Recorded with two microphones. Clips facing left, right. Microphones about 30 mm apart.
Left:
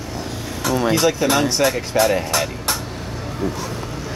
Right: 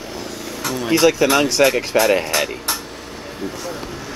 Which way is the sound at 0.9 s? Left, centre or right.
Right.